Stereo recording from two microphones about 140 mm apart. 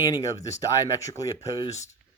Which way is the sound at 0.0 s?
25° left (ahead or behind).